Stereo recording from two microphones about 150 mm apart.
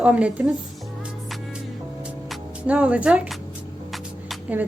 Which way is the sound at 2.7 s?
10° right (ahead or behind).